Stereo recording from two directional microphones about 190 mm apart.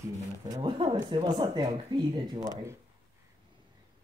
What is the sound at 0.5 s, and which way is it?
Speech, 25° right (ahead or behind).